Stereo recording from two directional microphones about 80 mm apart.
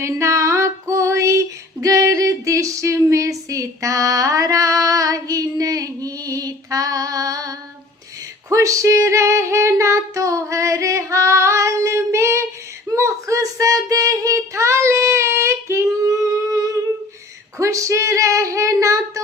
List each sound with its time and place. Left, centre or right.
0.0 s female singing: right
13.0 s child singing: right
17.6 s female singing: right